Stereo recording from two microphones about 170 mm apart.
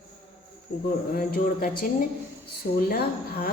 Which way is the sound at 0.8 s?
60° left (ahead or behind).